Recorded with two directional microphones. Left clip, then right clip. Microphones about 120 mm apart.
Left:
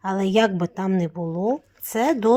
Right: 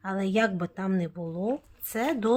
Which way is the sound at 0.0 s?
45° left (ahead or behind).